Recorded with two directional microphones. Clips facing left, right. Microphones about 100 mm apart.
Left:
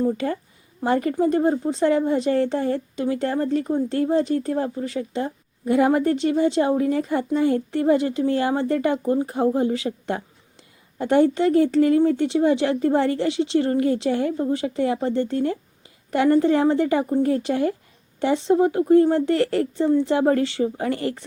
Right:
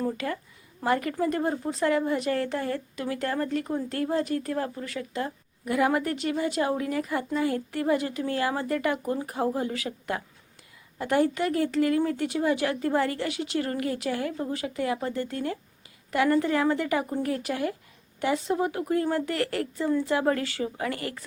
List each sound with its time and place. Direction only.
0.0 s speech: 30° left (ahead or behind)